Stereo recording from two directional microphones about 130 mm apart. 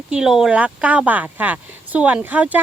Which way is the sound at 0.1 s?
5° right (ahead or behind).